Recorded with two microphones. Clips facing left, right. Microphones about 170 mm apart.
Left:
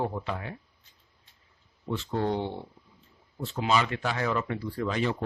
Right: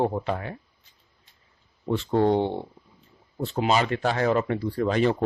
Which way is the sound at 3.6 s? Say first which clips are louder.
Right 3 dB; 35° right (ahead or behind).